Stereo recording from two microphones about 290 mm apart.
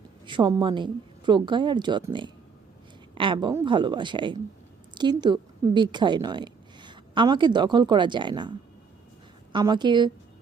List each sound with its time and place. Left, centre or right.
0.3 s a woman's voice: centre